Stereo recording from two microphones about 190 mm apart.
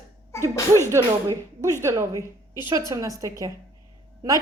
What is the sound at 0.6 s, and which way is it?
Speech, 15° left (ahead or behind).